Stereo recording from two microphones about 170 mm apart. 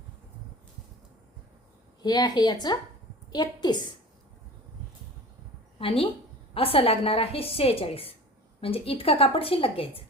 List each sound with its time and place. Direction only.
2.0 s a woman's voice: 25° left (ahead or behind)
5.8 s a woman's voice: 35° left (ahead or behind)